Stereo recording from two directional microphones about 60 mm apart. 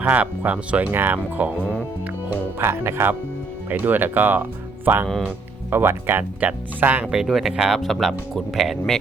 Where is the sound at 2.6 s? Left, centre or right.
Right.